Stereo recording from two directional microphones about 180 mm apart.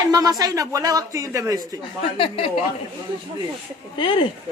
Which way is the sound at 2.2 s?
30° left (ahead or behind).